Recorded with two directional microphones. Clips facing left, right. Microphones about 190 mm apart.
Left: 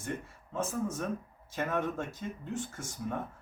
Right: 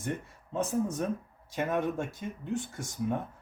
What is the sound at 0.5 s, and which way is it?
Speech, 15° right (ahead or behind).